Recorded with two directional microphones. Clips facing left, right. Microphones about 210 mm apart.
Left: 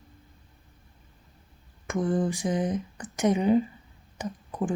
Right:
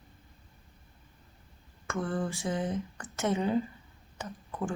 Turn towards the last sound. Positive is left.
turn(degrees=15)  # may be behind; listen again after turning